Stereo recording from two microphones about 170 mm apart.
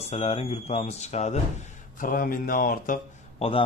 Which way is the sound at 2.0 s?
55° left (ahead or behind).